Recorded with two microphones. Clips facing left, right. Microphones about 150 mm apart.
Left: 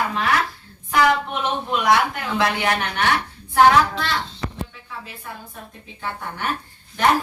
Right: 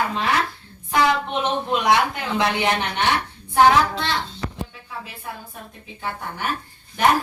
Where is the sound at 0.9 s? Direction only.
20° right (ahead or behind).